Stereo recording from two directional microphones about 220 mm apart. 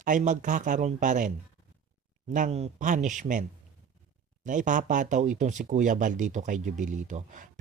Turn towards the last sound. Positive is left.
turn(degrees=-35)  # may be behind; listen again after turning